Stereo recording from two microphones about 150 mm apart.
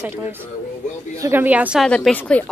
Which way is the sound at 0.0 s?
15° right (ahead or behind).